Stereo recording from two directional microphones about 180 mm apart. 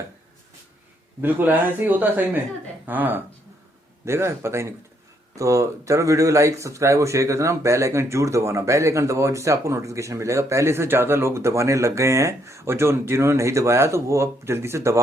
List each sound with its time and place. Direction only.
1.2 s speech: 10° right (ahead or behind)